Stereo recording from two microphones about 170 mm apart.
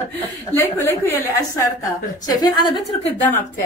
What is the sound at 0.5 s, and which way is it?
A woman's voice, 15° left (ahead or behind).